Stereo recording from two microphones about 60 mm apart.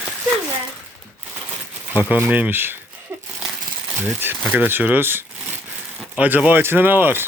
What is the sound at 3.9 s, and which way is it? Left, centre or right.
Speech, right.